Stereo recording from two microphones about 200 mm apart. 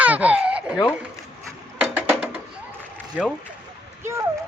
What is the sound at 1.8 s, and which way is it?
Music, 5° right (ahead or behind).